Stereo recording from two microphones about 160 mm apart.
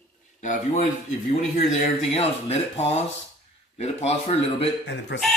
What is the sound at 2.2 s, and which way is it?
Speech, 40° left (ahead or behind).